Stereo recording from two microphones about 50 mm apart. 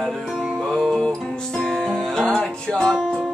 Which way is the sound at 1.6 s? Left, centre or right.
Centre.